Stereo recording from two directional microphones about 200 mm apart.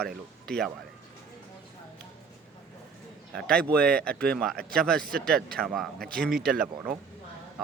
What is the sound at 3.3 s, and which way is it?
A man's voice, 5° left (ahead or behind).